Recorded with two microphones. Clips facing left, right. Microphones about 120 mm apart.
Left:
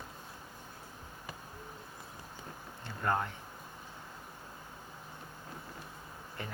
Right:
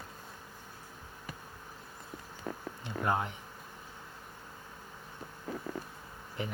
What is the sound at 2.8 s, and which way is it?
Speech, 15° right (ahead or behind).